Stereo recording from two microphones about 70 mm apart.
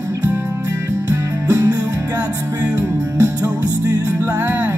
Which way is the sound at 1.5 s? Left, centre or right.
Right.